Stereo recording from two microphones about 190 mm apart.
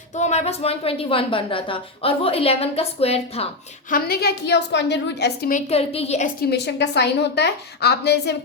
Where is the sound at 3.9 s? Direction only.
50° left (ahead or behind); by 6.2 s 35° left (ahead or behind).